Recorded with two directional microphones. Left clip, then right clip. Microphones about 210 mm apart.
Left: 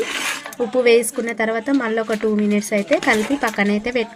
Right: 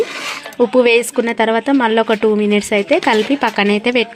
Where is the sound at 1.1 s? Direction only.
35° right (ahead or behind).